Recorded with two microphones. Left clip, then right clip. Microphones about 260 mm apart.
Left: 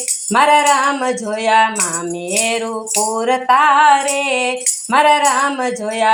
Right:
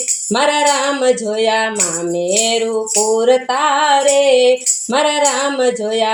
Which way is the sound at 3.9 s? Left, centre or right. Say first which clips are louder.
Right 3 dB; left.